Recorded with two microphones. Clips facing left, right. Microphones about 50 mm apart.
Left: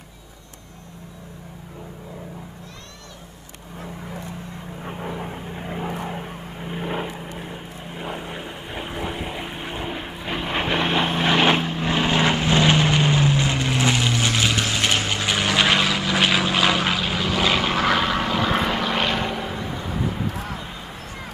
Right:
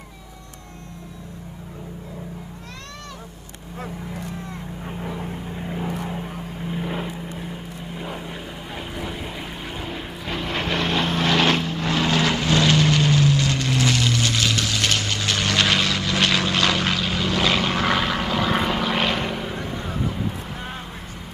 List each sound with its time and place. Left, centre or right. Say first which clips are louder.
4.8 s vehicle: left 1 dB; centre